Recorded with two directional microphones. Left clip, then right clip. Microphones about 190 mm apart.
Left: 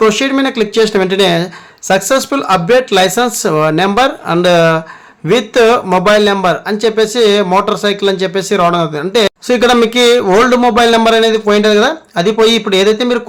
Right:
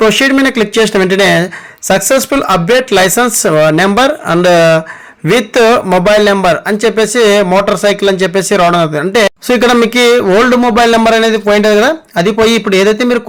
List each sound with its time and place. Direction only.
0.0 s speech: 20° right (ahead or behind)